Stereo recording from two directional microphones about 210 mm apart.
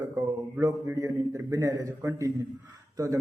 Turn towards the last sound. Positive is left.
turn(degrees=-15)  # may be behind; listen again after turning